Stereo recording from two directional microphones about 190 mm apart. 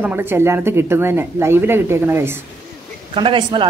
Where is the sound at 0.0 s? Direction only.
10° right (ahead or behind).